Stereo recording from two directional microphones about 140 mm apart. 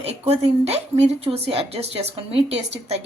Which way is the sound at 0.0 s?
45° right (ahead or behind).